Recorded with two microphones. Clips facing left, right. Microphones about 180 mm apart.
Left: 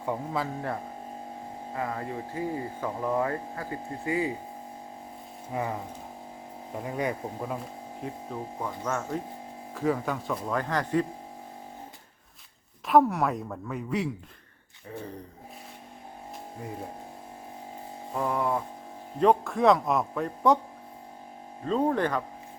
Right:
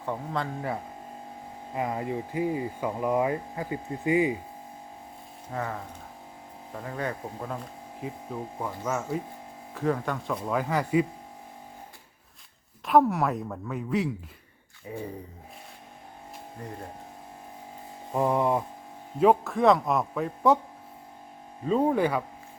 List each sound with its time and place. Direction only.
0.0 s speech: 10° left (ahead or behind)
1.7 s speech: 20° right (ahead or behind)
5.5 s speech: 15° left (ahead or behind)
8.3 s a man's voice: 5° right (ahead or behind)
12.8 s a man's voice: centre (ahead or behind)
14.8 s speech: 10° right (ahead or behind)
18.1 s a sound: 20° right (ahead or behind)
19.2 s a man's voice: centre (ahead or behind)
21.6 s speech: 10° right (ahead or behind)